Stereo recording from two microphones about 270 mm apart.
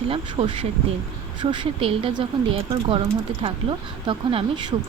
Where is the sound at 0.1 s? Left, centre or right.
Right.